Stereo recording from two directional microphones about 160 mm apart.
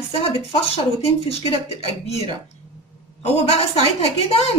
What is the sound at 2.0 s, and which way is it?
A woman's voice, 40° left (ahead or behind).